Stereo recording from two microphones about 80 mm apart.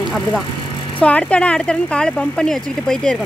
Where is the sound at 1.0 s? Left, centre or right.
Centre.